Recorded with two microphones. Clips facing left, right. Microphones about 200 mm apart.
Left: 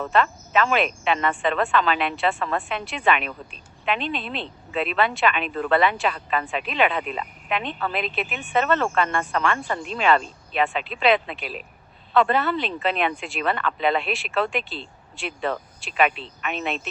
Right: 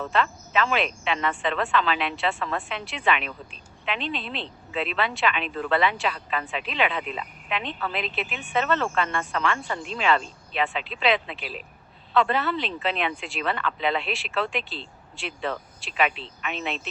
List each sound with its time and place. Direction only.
0.1 s speech: 50° left (ahead or behind)